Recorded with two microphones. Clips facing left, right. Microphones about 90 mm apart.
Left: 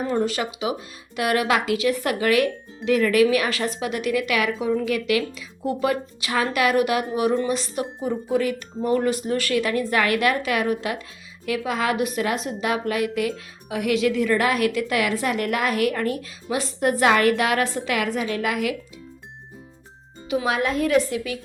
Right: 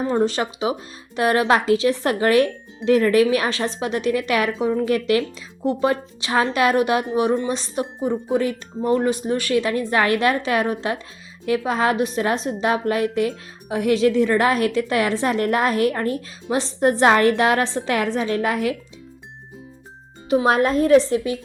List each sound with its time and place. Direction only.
0.0 s a woman's voice: 30° right (ahead or behind)
20.3 s a woman's voice: 40° right (ahead or behind)